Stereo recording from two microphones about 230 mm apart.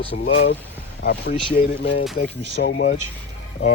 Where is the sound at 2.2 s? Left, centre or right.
Left.